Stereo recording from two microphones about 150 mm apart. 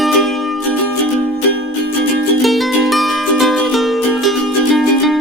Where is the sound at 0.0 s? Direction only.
Centre (ahead or behind).